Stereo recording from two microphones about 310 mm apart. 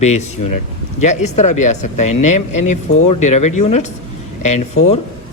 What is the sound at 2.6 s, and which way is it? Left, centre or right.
Speech, left.